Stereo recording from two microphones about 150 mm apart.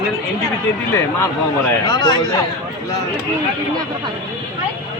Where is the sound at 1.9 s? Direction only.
30° left (ahead or behind).